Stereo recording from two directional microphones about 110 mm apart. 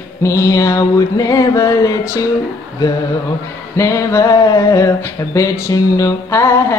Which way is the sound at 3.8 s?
25° left (ahead or behind).